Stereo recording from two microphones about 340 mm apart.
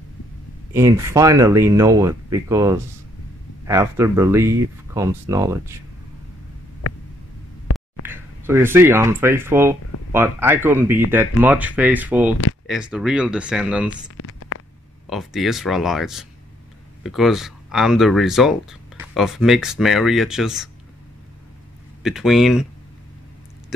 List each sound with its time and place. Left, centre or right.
0.7 s speech: centre
8.1 s speech: centre
14.1 s a sound: left
15.0 s speech: centre
22.0 s speech: centre